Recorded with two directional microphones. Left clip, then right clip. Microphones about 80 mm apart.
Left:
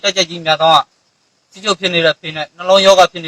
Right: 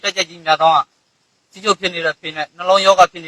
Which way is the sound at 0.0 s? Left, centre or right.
Left.